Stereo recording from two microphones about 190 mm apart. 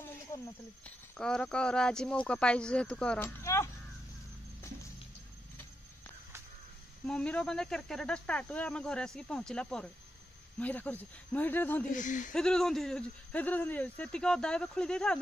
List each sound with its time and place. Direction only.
0.8 s speech: 5° left (ahead or behind)
7.1 s speech: 5° left (ahead or behind)
11.9 s speech: 40° left (ahead or behind)
12.3 s speech: 5° left (ahead or behind)